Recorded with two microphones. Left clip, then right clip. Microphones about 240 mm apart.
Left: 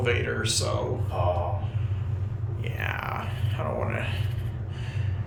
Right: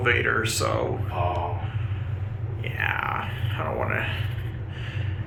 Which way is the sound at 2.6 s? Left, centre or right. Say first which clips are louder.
Right 6 dB; centre.